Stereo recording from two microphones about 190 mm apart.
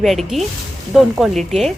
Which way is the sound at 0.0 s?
Centre (ahead or behind).